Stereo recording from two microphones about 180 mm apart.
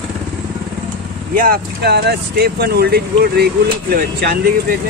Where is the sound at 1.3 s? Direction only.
55° right (ahead or behind).